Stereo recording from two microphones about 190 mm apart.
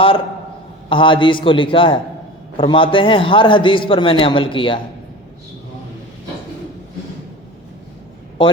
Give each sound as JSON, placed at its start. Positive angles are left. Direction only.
{"t": 0.9, "sound": "a man's voice", "side_deg": 25}